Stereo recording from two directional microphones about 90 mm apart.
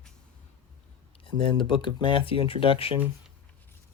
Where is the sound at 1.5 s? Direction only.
65° left (ahead or behind); by 2.9 s 90° left.